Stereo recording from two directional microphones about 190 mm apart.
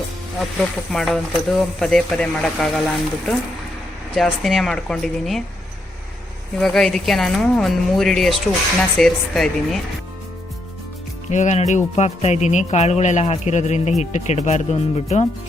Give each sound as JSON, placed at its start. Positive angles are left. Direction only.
{"t": 0.9, "sound": "speech", "side_deg": 5}
{"t": 6.6, "sound": "speech", "side_deg": 0}
{"t": 11.3, "sound": "speech", "side_deg": 40}